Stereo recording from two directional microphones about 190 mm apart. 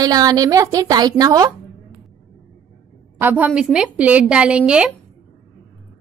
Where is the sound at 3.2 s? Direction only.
10° right (ahead or behind).